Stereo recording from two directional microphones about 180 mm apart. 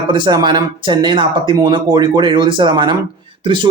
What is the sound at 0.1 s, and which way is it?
A man's voice, 25° right (ahead or behind).